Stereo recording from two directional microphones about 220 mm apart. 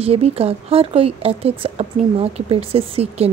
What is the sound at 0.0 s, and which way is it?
A woman's voice, 25° right (ahead or behind).